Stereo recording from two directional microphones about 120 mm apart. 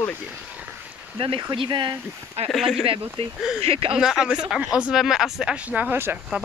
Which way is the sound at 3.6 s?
50° right (ahead or behind).